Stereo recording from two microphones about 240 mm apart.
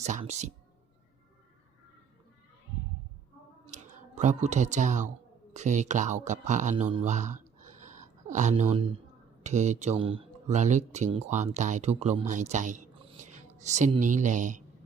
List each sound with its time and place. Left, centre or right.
0.0 s speech: right
3.7 s speech: right
6.9 s a sound: right
9.4 s speech: right